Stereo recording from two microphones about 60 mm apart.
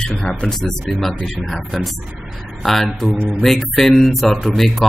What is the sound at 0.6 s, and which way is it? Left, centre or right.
Speech, centre.